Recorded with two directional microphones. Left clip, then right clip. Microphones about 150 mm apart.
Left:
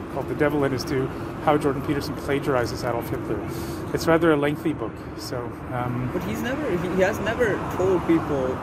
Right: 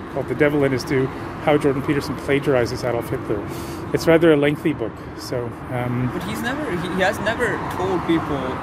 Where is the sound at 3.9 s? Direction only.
55° right (ahead or behind).